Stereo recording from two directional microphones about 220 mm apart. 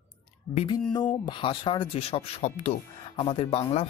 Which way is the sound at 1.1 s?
20° left (ahead or behind).